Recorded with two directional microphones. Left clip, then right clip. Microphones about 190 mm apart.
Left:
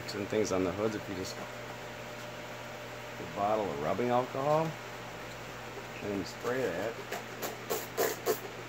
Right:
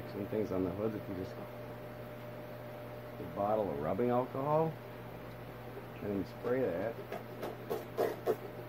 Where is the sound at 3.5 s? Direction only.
10° left (ahead or behind).